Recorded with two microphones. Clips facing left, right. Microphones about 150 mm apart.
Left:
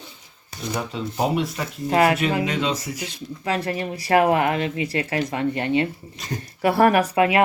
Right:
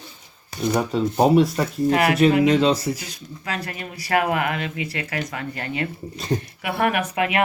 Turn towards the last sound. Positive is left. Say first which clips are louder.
# left 4 dB
turn(degrees=30)  # may be behind; listen again after turning